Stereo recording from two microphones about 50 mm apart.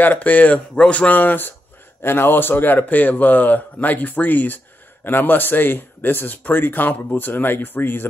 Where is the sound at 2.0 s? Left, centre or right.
Left.